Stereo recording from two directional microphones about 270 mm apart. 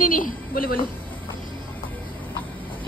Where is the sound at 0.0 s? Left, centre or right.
Left.